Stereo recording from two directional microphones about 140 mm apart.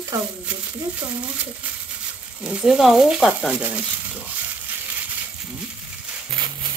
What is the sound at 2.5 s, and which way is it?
Speech, 5° right (ahead or behind).